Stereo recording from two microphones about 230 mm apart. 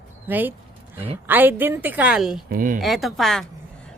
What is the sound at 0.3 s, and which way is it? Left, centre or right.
A woman's voice, centre.